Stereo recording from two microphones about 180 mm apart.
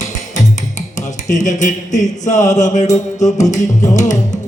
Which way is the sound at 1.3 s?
45° left (ahead or behind).